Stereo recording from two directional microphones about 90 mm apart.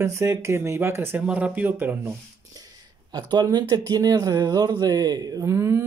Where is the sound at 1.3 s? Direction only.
15° right (ahead or behind).